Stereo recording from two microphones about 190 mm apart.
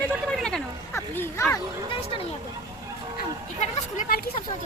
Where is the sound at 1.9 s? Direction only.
30° left (ahead or behind).